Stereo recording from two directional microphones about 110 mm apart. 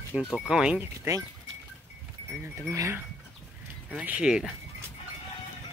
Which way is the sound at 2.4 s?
25° right (ahead or behind).